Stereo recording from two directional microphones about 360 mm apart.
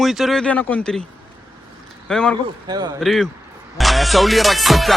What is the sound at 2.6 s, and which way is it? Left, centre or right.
Speech, centre.